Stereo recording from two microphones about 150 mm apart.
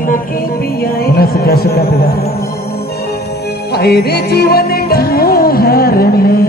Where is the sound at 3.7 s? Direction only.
90° left.